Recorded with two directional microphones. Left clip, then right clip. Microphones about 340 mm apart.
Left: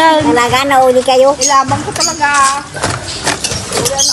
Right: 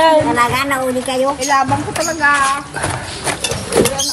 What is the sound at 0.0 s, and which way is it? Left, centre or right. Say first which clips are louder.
A woman's voice: left 3 dB; centre.